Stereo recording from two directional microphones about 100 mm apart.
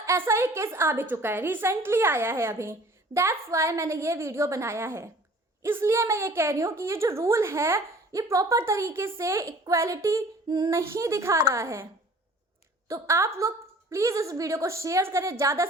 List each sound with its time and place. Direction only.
0.0 s a woman's voice: 25° right (ahead or behind)
12.9 s a woman's voice: 30° right (ahead or behind)